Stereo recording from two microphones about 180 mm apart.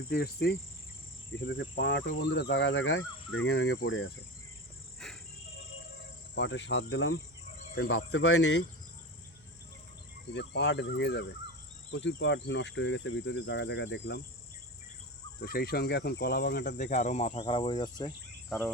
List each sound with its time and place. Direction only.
0.1 s speech: 60° left (ahead or behind)
1.4 s speech: 75° left (ahead or behind)
5.0 s insect: 5° left (ahead or behind)
6.3 s speech: 80° left
7.8 s speech: 70° left (ahead or behind)
10.3 s speech: 75° left (ahead or behind)
11.9 s speech: 90° left
15.4 s speech: 60° left (ahead or behind)
16.7 s speech: 40° left (ahead or behind)
17.4 s speech: 25° left (ahead or behind)
18.4 s cricket: centre (ahead or behind)